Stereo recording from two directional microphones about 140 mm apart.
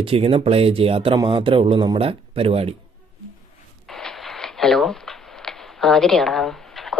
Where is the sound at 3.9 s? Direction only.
Centre (ahead or behind).